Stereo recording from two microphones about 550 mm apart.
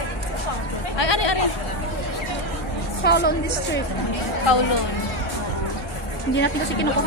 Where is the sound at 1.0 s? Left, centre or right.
Left.